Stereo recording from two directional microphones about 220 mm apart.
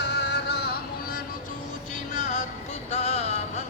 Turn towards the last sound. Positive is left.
turn(degrees=30)  # may be behind; listen again after turning